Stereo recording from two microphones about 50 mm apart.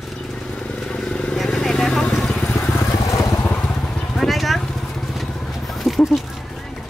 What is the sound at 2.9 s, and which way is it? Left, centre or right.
Vehicle, left.